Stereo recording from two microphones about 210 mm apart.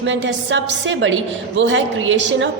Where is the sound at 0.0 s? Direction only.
60° right (ahead or behind).